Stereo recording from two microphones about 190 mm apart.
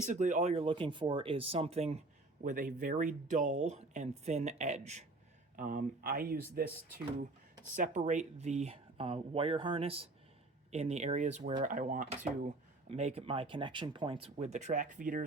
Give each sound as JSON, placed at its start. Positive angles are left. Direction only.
{"t": 0.0, "sound": "speech", "side_deg": -40}
{"t": 2.4, "sound": "speech", "side_deg": -45}
{"t": 7.8, "sound": "speech", "side_deg": -40}